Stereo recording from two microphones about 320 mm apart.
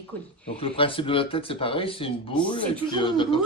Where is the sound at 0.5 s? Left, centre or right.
Centre.